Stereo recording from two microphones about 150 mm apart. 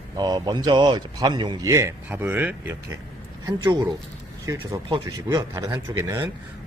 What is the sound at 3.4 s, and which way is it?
Speech, 25° right (ahead or behind).